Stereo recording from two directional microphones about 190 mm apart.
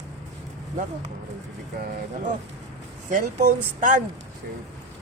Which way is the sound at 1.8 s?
45° right (ahead or behind).